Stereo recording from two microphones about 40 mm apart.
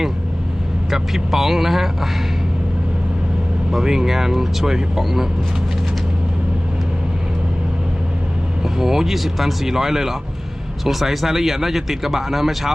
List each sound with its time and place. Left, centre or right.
0.9 s speech: centre
3.7 s speech: centre
8.6 s speech: centre